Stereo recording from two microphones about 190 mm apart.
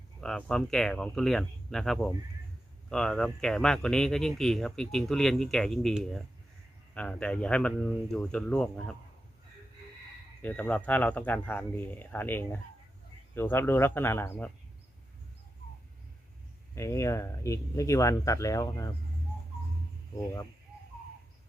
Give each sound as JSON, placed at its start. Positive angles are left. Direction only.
{"t": 0.2, "sound": "speech", "side_deg": 5}
{"t": 10.4, "sound": "speech", "side_deg": 5}
{"t": 16.7, "sound": "speech", "side_deg": 15}
{"t": 20.1, "sound": "speech", "side_deg": 15}